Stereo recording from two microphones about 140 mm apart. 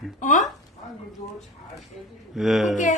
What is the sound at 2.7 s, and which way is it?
Speech, 60° left (ahead or behind).